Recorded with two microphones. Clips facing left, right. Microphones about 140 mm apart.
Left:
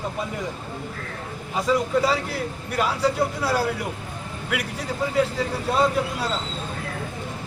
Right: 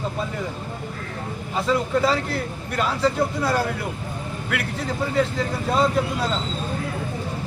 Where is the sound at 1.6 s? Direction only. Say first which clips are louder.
Even; 10° left (ahead or behind).